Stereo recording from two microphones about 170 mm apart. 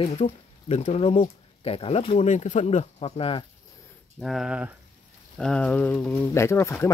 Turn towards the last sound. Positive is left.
turn(degrees=15)  # may be behind; listen again after turning